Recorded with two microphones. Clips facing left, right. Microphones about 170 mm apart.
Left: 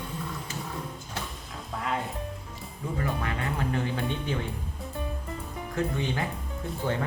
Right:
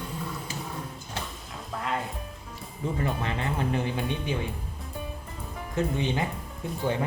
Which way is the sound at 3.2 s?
25° right (ahead or behind).